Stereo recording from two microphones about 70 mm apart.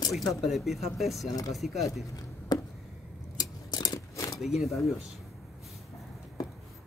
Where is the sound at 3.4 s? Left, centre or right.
Left.